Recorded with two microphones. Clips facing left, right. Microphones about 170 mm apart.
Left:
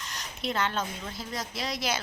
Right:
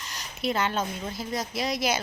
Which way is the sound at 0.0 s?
5° right (ahead or behind).